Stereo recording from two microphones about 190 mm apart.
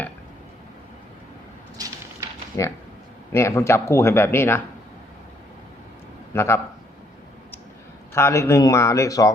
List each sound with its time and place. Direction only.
2.5 s speech: 15° left (ahead or behind)
6.3 s speech: 15° left (ahead or behind)
8.1 s speech: 15° left (ahead or behind)